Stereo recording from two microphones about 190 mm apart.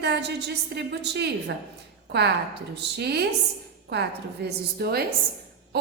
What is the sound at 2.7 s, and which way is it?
A woman's voice, 60° right (ahead or behind).